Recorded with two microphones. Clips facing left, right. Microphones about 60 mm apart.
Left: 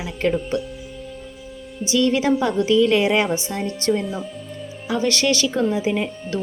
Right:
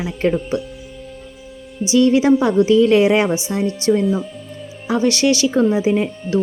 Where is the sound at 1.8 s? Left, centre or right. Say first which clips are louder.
Right 5 dB; centre.